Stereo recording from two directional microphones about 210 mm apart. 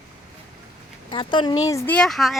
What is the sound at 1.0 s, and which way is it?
Speech, 20° left (ahead or behind).